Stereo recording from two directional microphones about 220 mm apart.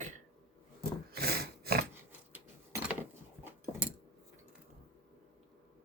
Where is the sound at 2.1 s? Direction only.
10° right (ahead or behind).